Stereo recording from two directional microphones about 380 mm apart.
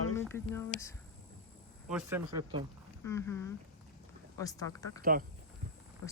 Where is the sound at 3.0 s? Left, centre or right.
Centre.